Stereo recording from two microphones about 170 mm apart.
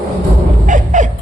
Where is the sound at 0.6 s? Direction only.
50° right (ahead or behind).